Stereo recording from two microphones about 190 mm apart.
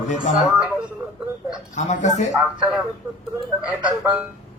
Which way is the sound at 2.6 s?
Centre (ahead or behind).